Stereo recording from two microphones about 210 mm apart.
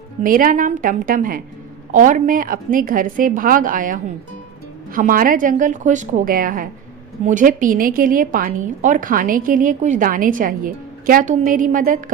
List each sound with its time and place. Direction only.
0.2 s a woman's voice: 40° right (ahead or behind)